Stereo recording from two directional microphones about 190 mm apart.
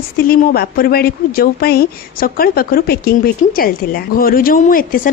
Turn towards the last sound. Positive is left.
turn(degrees=45)  # may be behind; listen again after turning